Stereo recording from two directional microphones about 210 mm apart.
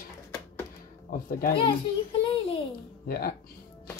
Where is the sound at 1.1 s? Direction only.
40° left (ahead or behind).